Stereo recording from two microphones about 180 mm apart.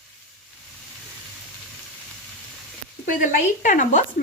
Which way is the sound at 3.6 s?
45° left (ahead or behind).